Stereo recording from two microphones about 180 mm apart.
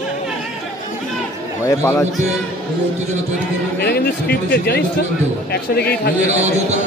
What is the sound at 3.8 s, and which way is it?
Speech, 60° left (ahead or behind).